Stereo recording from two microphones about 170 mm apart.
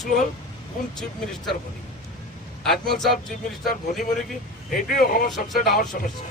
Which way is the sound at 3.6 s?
50° left (ahead or behind).